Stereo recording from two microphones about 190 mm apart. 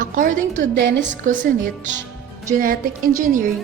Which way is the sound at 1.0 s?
40° right (ahead or behind).